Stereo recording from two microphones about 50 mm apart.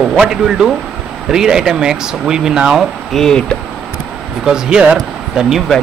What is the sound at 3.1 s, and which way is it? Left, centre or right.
Speech, centre.